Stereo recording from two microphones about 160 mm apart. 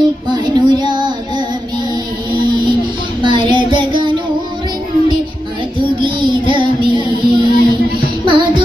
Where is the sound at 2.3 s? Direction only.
30° right (ahead or behind).